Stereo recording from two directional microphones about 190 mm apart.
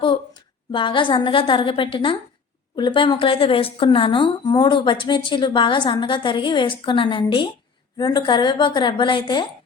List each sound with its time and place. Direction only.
0.0 s a woman's voice: 25° left (ahead or behind)